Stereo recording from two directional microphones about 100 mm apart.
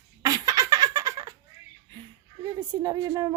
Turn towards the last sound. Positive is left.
turn(degrees=-35)  # may be behind; listen again after turning